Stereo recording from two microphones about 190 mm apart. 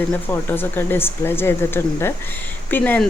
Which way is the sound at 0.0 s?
10° left (ahead or behind).